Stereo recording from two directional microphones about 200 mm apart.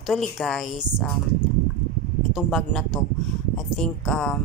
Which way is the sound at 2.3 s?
Centre (ahead or behind).